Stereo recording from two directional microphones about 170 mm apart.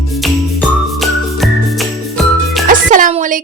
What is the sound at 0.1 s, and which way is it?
Music, centre (ahead or behind).